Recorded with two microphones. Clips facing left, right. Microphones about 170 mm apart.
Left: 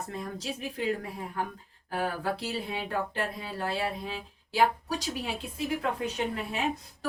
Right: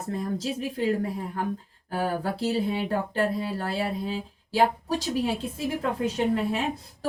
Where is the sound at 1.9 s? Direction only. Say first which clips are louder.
Right 3 dB; 30° right (ahead or behind).